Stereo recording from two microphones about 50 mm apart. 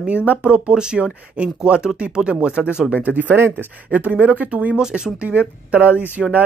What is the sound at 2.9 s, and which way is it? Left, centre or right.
Speech, right.